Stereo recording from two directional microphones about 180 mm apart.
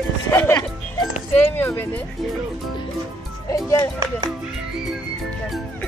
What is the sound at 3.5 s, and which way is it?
Speech, 20° left (ahead or behind).